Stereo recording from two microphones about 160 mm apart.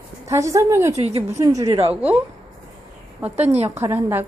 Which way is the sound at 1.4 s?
20° right (ahead or behind).